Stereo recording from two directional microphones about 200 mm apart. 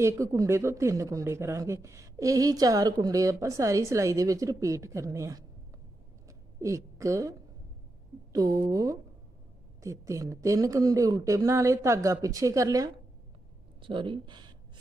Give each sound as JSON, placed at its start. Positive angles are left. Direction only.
{"t": 0.0, "sound": "speech", "side_deg": -15}
{"t": 6.2, "sound": "a sound", "side_deg": -15}
{"t": 8.3, "sound": "speech", "side_deg": -20}